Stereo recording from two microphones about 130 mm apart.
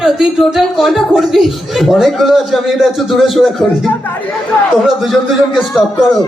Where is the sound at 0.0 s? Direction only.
5° right (ahead or behind).